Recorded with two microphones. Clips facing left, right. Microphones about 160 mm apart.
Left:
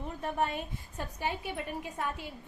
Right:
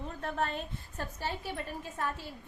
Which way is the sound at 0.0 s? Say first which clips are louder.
Left 2 dB; 15° left (ahead or behind).